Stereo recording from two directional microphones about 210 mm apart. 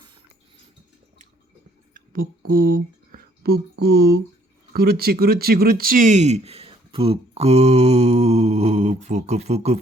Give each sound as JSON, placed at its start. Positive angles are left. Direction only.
{"t": 1.9, "sound": "speech", "side_deg": -45}